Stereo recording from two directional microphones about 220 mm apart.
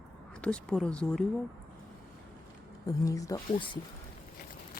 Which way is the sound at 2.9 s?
15° left (ahead or behind).